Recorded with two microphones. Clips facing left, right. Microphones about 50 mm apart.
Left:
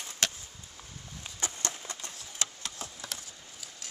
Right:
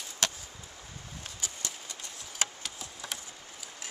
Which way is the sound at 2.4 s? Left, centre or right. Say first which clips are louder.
Right 3 dB; right.